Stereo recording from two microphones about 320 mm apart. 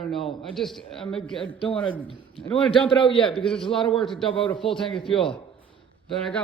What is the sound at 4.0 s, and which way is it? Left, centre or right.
Speech, centre.